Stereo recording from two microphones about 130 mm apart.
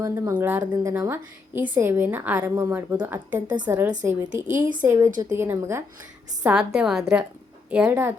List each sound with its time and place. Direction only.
0.0 s a woman's voice: 20° right (ahead or behind)
0.8 s a woman's voice: 25° right (ahead or behind)
3.4 s a woman's voice: 35° right (ahead or behind)
3.7 s a woman's voice: 15° right (ahead or behind)
6.4 s a woman's voice: 5° right (ahead or behind)